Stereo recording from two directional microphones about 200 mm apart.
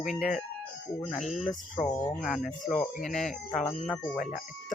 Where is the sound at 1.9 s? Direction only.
20° left (ahead or behind).